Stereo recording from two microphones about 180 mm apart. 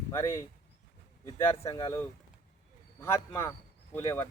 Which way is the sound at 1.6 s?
25° left (ahead or behind).